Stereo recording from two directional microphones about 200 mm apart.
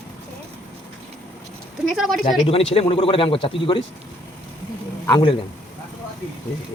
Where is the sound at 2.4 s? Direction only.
30° left (ahead or behind).